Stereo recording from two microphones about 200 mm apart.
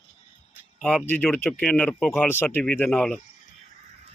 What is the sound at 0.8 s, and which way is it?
Speech, 5° left (ahead or behind).